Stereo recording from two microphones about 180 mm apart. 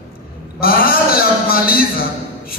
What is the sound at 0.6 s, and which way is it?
A man's voice, 55° left (ahead or behind).